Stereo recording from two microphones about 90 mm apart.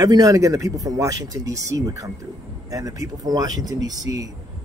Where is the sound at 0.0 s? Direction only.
45° right (ahead or behind).